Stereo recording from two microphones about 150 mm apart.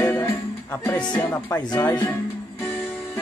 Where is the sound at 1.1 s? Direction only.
15° left (ahead or behind).